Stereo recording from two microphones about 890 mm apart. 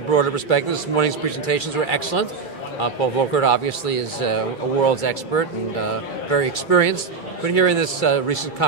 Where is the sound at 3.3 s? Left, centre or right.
Left.